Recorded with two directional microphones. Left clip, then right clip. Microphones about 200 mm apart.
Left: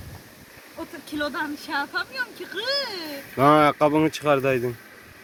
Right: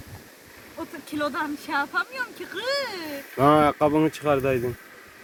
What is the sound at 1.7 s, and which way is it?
Speech, 10° right (ahead or behind).